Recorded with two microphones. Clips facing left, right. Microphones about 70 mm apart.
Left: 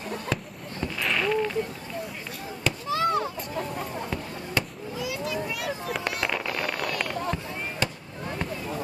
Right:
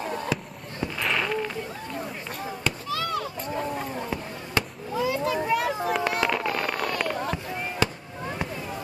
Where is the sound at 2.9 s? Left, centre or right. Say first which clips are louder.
Left 6 dB; left.